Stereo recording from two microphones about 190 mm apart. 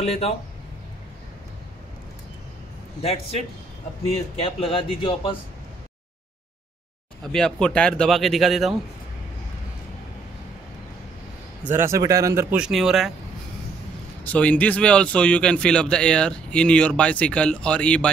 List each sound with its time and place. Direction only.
0.0 s speech: 35° left (ahead or behind)
3.0 s speech: 30° left (ahead or behind)
7.3 s a man's voice: 5° left (ahead or behind)
11.6 s speech: 10° right (ahead or behind)
14.2 s a man's voice: 10° left (ahead or behind)